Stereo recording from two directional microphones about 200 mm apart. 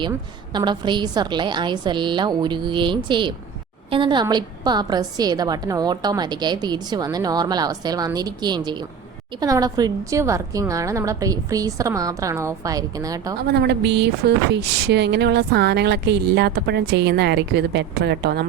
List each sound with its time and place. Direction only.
0.1 s a woman's voice: 20° right (ahead or behind)
13.5 s speech: 55° right (ahead or behind)